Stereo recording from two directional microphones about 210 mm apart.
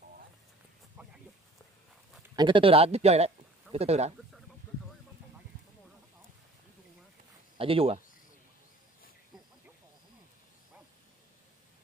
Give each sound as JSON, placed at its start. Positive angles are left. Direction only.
{"t": 1.0, "sound": "a sound", "side_deg": -10}
{"t": 2.3, "sound": "speech", "side_deg": -25}
{"t": 7.5, "sound": "speech", "side_deg": -25}